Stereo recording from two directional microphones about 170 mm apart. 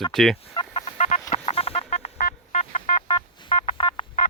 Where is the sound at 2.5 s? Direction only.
40° left (ahead or behind).